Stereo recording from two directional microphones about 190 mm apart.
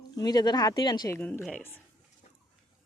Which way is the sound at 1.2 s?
10° left (ahead or behind).